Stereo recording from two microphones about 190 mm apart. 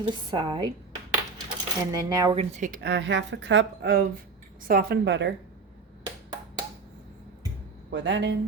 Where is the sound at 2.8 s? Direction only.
65° right (ahead or behind).